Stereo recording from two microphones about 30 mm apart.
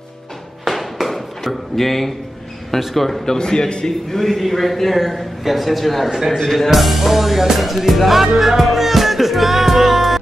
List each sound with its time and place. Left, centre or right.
0.7 s tap: centre
1.0 s chop: centre
2.8 s a man's voice: centre
3.3 s a man's voice: left
4.1 s a man's voice: centre
6.0 s a man's voice: centre
6.3 s speech: centre
6.7 s a man's voice: centre
8.3 s music: centre